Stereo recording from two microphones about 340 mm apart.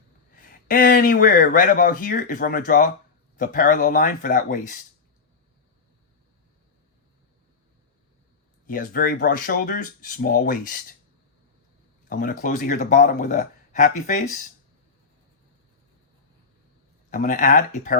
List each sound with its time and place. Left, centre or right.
0.7 s speech: left
8.6 s speech: left
12.0 s speech: left
17.1 s speech: left